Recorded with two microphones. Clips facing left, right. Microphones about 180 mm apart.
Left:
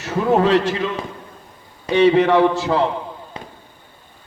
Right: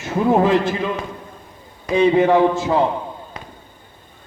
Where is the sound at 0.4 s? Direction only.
75° left (ahead or behind).